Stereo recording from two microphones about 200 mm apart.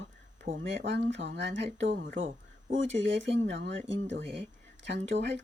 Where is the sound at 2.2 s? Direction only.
35° right (ahead or behind).